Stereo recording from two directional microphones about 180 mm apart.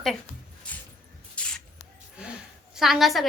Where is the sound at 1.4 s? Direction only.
5° left (ahead or behind).